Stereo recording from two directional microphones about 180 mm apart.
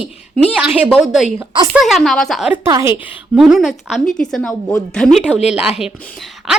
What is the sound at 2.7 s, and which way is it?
Speech, 15° right (ahead or behind).